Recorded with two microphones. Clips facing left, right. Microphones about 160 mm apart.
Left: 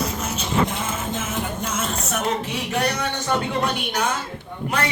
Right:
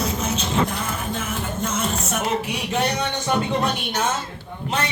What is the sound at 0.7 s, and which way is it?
Music, 20° left (ahead or behind).